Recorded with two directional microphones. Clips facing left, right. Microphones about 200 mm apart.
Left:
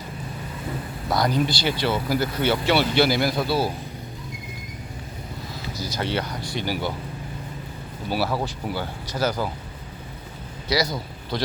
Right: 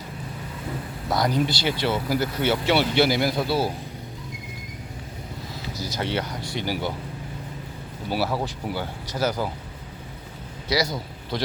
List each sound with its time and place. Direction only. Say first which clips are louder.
1.1 s speech: left 1 dB; 20° right (ahead or behind)
5.8 s speech: left 1 dB; 20° right (ahead or behind)
8.1 s speech: left 1 dB; 20° right (ahead or behind)
10.9 s a man's voice: left 1 dB; 20° right (ahead or behind)